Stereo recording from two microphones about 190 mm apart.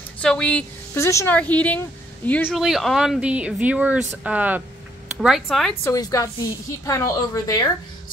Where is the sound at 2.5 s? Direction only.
Centre (ahead or behind).